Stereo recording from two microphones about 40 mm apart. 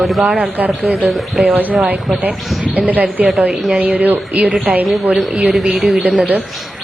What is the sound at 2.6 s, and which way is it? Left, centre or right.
A woman's voice, right.